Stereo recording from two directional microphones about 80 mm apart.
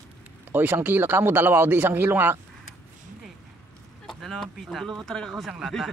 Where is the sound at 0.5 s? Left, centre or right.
Right.